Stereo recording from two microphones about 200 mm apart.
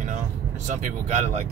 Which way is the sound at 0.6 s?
35° right (ahead or behind).